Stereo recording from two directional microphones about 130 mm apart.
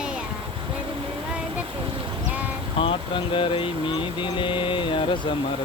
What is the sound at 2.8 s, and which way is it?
Speech, 40° left (ahead or behind).